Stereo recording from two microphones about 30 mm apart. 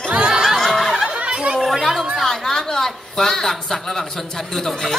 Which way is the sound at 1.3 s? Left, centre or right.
Right.